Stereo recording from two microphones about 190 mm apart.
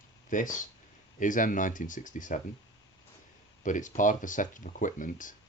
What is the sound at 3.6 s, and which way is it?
Speech, 40° left (ahead or behind).